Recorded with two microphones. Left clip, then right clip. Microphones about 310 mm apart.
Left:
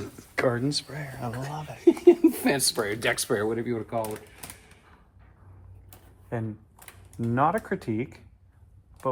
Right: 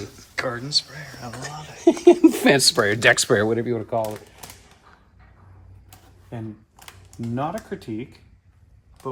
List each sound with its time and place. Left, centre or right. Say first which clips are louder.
0.3 s speech: right 2 dB; left
1.8 s speech: right 4 dB; right
7.3 s speech: left 4 dB; left